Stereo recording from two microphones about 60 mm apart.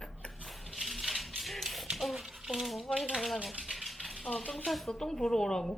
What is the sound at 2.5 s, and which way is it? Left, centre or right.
Speech, centre.